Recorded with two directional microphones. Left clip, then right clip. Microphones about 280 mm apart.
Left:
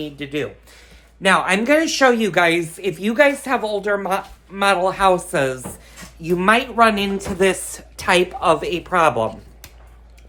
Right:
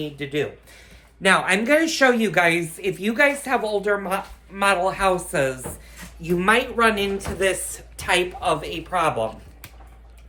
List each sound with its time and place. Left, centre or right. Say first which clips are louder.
0.0 s speech: even; centre; by 9.3 s left